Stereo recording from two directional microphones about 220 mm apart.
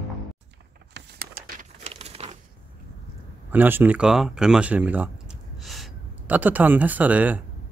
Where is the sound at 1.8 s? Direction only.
25° right (ahead or behind).